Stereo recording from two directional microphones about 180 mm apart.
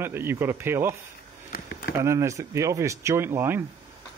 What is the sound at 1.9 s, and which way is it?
Speech, 15° right (ahead or behind).